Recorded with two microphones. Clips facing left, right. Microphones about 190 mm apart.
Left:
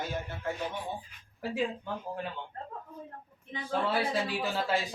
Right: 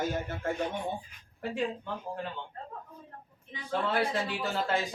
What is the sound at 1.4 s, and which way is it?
Speech, 5° left (ahead or behind).